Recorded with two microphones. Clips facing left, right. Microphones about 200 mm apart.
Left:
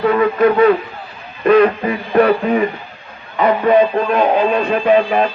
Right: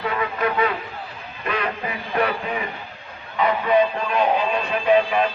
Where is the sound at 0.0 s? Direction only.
50° left (ahead or behind).